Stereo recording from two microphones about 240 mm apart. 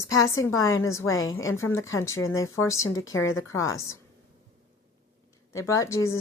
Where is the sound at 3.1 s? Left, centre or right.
Left.